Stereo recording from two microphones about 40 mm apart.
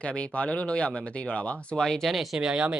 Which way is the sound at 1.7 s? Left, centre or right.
Centre.